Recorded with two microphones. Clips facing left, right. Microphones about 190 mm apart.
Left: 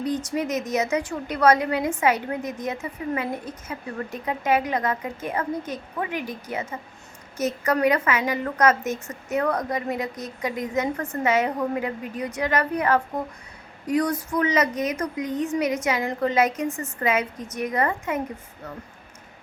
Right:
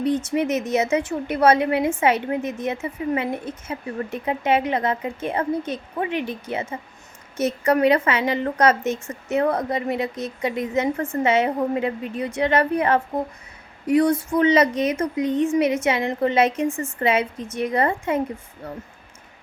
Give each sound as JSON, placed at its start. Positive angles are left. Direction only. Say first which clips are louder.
{"t": 0.0, "sound": "speech", "louder": "right 4 dB", "side_deg": -25}